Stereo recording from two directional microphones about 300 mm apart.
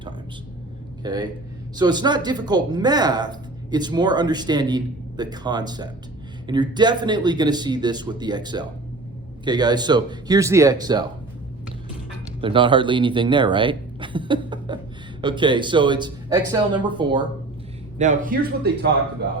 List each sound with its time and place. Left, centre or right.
1.0 s a man's voice: centre
12.4 s a man's voice: centre